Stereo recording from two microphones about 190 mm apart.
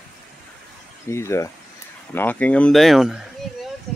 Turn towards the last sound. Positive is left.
turn(degrees=0)  # may be behind; listen again after turning